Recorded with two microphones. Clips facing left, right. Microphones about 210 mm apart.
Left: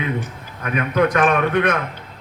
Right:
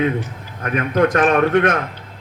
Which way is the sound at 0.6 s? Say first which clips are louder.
Right 2 dB; 45° right (ahead or behind).